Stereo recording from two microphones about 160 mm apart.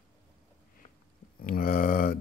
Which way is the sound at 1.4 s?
60° left (ahead or behind).